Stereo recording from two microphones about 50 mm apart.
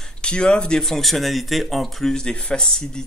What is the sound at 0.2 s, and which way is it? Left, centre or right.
Speech, centre.